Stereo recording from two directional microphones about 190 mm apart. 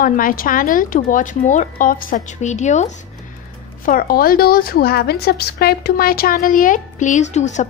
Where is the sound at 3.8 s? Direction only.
50° left (ahead or behind).